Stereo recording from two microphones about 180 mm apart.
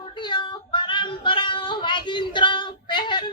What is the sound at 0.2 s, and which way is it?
Child singing, 25° left (ahead or behind).